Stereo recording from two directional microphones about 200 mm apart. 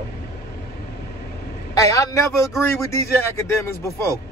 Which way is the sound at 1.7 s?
15° left (ahead or behind).